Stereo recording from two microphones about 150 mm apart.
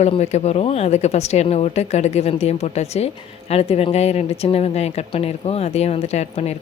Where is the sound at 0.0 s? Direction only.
45° left (ahead or behind).